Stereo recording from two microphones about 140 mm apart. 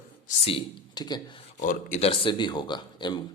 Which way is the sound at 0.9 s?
30° left (ahead or behind).